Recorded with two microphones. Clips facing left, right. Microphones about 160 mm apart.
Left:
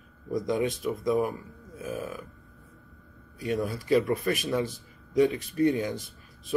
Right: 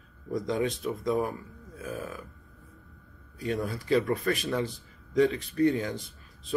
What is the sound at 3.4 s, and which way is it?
Speech, 20° left (ahead or behind).